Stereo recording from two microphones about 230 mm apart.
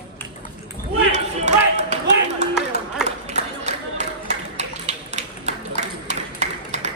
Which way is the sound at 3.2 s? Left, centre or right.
Right.